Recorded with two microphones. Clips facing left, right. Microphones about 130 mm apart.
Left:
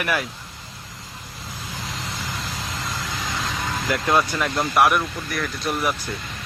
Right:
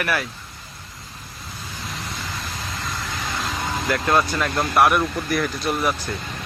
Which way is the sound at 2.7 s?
90° left.